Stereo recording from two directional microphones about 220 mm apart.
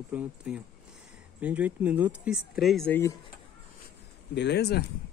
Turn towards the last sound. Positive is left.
turn(degrees=45)  # may be behind; listen again after turning